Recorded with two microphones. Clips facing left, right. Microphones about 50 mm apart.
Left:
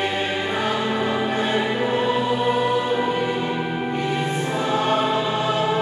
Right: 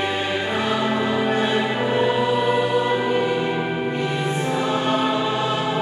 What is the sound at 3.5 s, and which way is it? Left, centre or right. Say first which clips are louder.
Music: right 1 dB; centre.